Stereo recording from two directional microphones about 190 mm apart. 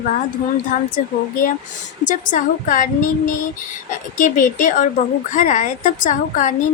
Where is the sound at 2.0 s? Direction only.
40° left (ahead or behind).